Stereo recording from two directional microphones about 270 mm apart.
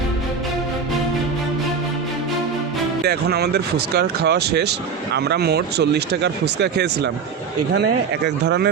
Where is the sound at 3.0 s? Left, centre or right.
Right.